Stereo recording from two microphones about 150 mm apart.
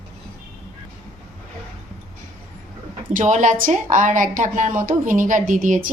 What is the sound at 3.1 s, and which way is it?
A woman's voice, 55° right (ahead or behind).